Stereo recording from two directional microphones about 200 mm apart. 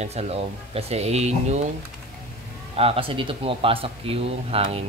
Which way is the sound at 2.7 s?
30° right (ahead or behind).